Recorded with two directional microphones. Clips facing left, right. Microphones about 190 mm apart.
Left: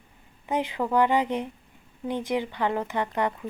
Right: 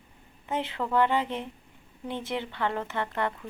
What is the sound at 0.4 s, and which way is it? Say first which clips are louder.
Speech: left 4 dB; 15° left (ahead or behind).